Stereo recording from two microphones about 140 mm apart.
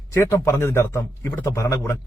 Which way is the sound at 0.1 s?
20° left (ahead or behind).